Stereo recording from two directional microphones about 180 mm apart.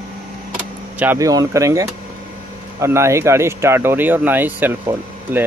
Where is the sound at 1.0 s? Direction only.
15° right (ahead or behind).